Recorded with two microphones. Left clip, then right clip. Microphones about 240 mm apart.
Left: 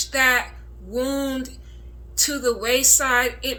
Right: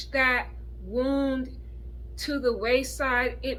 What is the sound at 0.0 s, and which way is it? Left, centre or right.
A woman's voice, centre.